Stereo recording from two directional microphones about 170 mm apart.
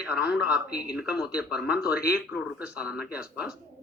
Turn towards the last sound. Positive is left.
turn(degrees=-5)  # may be behind; listen again after turning